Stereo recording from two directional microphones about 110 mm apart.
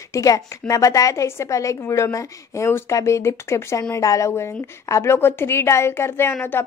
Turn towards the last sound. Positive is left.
turn(degrees=20)  # may be behind; listen again after turning